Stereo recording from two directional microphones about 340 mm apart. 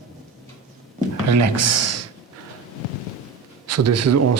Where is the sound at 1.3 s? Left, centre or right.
Right.